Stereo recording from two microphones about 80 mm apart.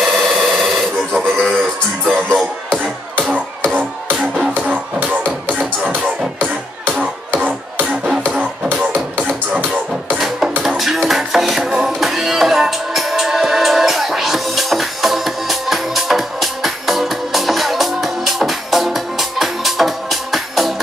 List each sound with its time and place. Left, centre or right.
0.0 s a sound: centre
3.2 s music: right
8.2 s music: centre
10.1 s music: centre